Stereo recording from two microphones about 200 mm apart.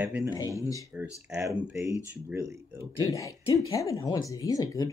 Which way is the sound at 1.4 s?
10° right (ahead or behind).